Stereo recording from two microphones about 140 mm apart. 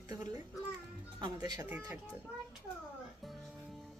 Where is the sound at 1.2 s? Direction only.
30° right (ahead or behind).